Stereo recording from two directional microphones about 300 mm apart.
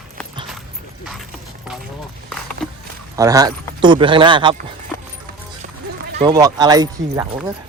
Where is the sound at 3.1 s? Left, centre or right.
Centre.